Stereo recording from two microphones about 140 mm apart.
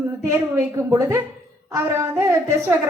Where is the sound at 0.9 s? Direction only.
25° right (ahead or behind).